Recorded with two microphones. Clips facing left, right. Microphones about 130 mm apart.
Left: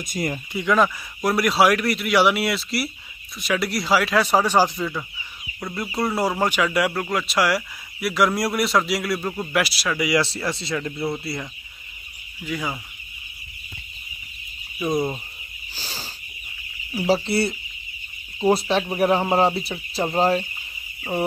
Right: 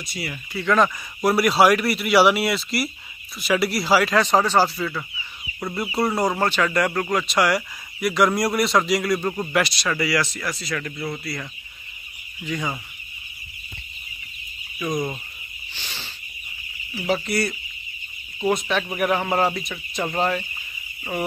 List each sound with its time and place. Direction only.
0.0 s speech: 45° left (ahead or behind)
0.5 s speech: 20° left (ahead or behind)
0.7 s speech: centre (ahead or behind); by 5.0 s 15° left (ahead or behind)
5.6 s speech: 5° right (ahead or behind)
10.2 s speech: 30° left (ahead or behind)
12.4 s speech: 5° left (ahead or behind)
14.8 s speech: 30° left (ahead or behind)
15.7 s cricket: 35° left (ahead or behind)
16.9 s speech: 35° left (ahead or behind)